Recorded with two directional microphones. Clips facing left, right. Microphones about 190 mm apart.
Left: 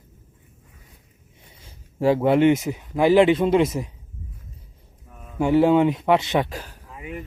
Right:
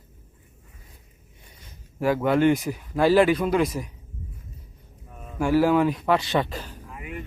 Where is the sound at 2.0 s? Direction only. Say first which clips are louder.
Left 3 dB; 25° left (ahead or behind).